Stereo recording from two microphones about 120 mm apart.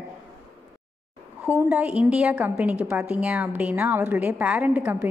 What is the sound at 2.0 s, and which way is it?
A woman's voice, 10° right (ahead or behind).